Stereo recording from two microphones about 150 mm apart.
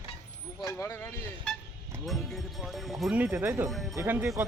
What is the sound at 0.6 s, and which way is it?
Speech, 20° left (ahead or behind).